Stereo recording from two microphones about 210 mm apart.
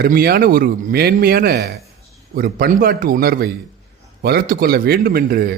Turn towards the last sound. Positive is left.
turn(degrees=-45)  # may be behind; listen again after turning